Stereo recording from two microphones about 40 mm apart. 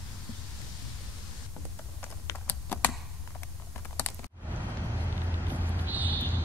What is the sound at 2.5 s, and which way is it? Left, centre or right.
Computer keyboard, left.